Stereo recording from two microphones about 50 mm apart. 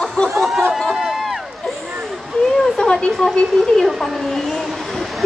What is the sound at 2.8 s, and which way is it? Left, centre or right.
A woman's voice, centre.